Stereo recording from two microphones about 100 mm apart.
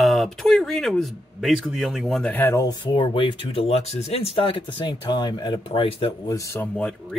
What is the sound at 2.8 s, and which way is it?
Speech, 55° left (ahead or behind).